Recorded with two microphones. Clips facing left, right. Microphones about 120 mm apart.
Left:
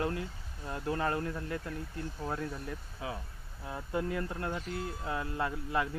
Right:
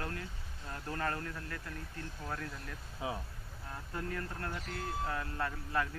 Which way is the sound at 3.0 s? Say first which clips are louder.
Right 1 dB; 25° right (ahead or behind).